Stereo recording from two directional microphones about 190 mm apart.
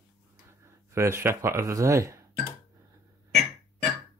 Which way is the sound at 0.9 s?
15° right (ahead or behind).